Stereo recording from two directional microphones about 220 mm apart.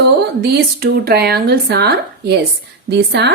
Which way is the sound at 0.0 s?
50° right (ahead or behind).